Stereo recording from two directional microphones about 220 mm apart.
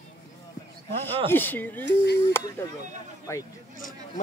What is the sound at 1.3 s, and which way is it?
Speech, 10° left (ahead or behind).